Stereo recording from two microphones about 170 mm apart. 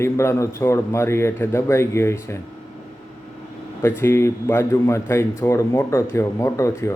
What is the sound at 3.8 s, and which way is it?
A man's voice, 15° left (ahead or behind).